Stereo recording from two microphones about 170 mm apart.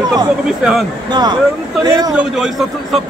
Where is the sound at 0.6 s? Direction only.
Centre (ahead or behind).